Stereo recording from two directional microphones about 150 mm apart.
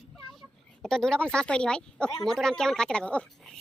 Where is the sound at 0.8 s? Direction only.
5° left (ahead or behind).